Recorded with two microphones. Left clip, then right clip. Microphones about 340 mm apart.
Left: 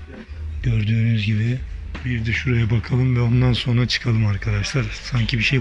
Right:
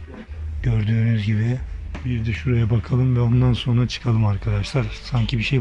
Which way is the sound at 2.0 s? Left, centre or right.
Centre.